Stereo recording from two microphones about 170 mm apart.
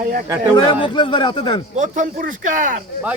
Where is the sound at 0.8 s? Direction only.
30° left (ahead or behind).